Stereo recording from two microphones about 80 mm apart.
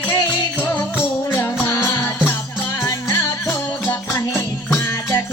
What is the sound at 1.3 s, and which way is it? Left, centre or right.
Music, left.